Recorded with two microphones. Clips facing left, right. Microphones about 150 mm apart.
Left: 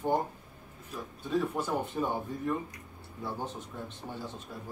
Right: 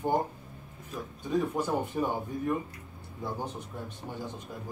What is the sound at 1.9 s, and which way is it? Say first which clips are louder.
A man's voice: right 2 dB; 15° right (ahead or behind).